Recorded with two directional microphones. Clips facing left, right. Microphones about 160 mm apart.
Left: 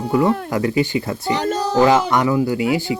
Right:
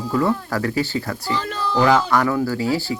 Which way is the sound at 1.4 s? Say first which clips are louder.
Left 5 dB; 40° left (ahead or behind).